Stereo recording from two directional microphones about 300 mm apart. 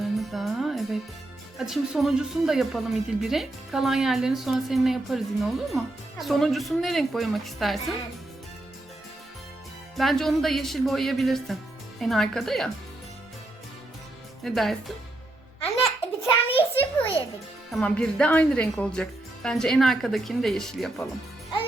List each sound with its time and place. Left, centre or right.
0.0 s music: centre
1.5 s speech: centre
10.0 s speech: centre
14.4 s speech: centre
15.8 s a sound: centre
17.0 s a child's voice: centre
17.7 s speech: centre